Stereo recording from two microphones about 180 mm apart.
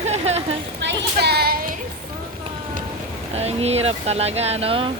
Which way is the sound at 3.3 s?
35° right (ahead or behind).